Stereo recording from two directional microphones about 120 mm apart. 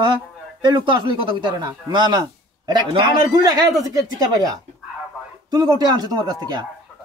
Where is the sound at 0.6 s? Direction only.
40° right (ahead or behind).